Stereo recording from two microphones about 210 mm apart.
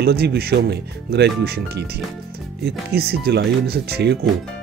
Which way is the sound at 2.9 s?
50° right (ahead or behind).